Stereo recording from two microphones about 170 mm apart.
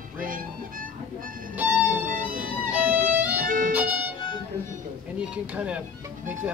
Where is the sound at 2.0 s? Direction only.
50° right (ahead or behind).